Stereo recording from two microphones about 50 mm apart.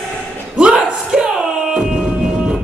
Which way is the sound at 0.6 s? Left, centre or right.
Right.